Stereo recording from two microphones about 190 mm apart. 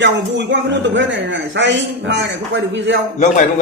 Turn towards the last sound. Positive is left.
turn(degrees=40)  # may be behind; listen again after turning